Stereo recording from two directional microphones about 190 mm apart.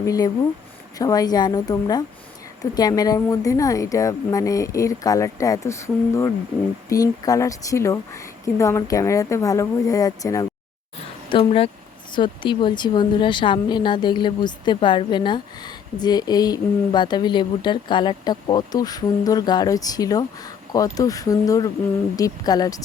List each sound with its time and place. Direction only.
0.0 s speech: 20° left (ahead or behind)
11.3 s speech: 30° left (ahead or behind)